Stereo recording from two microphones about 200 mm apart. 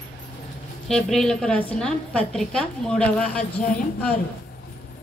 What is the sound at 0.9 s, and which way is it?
A woman's voice, 5° left (ahead or behind).